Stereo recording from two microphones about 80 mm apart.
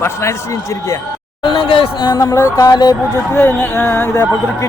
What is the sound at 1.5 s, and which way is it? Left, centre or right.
Speech, left.